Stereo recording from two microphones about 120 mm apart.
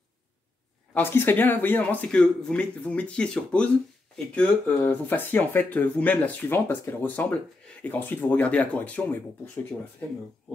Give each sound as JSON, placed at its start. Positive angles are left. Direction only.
{"t": 0.9, "sound": "speech", "side_deg": 20}